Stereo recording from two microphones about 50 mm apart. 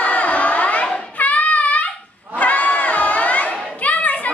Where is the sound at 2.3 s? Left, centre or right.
Left.